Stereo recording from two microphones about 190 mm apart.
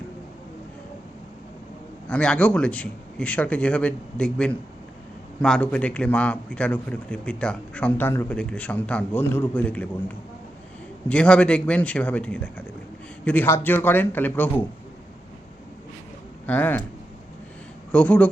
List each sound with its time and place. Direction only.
2.0 s a man's voice: 5° left (ahead or behind)
11.1 s a man's voice: 5° left (ahead or behind)
16.5 s a man's voice: 10° left (ahead or behind)
17.9 s a man's voice: 10° left (ahead or behind)